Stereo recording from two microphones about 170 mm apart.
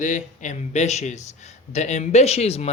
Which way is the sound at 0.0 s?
45° left (ahead or behind).